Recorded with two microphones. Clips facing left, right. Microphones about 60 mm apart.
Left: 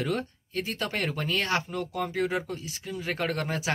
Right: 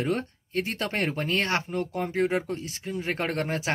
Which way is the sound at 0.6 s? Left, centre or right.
Right.